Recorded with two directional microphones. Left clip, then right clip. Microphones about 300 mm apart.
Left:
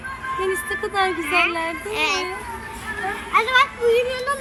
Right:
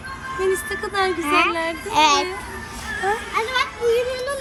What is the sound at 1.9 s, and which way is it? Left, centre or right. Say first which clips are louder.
Speech: right 7 dB; centre.